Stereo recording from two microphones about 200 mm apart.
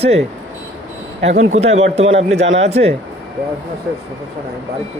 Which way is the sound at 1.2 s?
65° right (ahead or behind).